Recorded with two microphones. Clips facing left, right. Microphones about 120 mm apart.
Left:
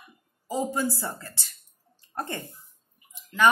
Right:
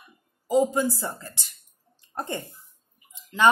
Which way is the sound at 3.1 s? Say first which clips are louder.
Right 1 dB; 25° right (ahead or behind).